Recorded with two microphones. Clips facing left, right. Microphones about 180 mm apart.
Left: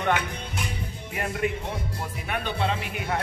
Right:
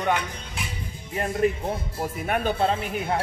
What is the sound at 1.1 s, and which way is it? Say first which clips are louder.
Speech: right 5 dB; 35° right (ahead or behind).